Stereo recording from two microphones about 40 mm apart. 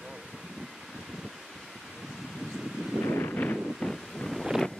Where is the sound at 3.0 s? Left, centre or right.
Left.